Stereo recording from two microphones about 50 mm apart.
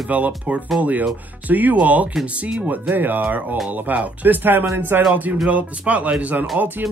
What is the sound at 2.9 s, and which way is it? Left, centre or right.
Speech, right.